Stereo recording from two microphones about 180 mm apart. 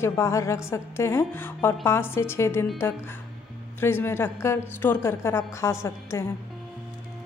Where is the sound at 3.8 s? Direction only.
10° left (ahead or behind).